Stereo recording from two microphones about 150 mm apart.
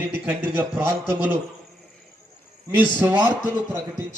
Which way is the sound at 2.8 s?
10° right (ahead or behind).